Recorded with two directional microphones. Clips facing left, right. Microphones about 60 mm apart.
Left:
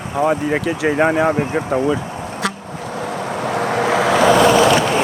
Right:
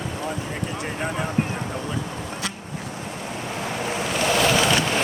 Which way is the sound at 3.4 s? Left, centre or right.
Left.